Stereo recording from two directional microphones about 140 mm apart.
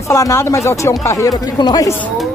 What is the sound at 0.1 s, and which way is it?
Speech, 20° left (ahead or behind).